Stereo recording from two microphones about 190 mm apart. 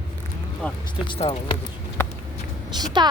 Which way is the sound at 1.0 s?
25° left (ahead or behind).